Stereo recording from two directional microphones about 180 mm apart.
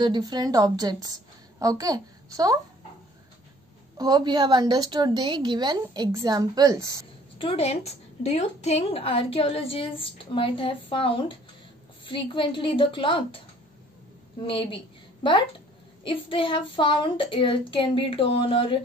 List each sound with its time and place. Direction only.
0.0 s a woman's voice: 25° right (ahead or behind)
4.0 s a woman's voice: 25° right (ahead or behind)
7.3 s a woman's voice: 30° left (ahead or behind)
12.0 s child singing: 30° left (ahead or behind)
14.4 s child singing: 30° left (ahead or behind)